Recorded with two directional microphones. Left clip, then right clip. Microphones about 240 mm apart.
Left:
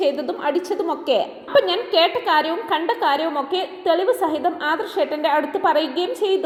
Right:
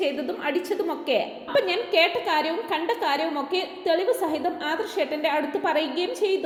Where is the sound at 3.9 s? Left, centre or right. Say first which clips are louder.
Left 4 dB; centre.